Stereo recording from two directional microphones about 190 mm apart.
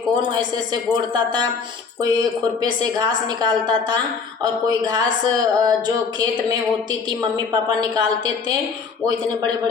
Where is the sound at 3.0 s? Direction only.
20° right (ahead or behind).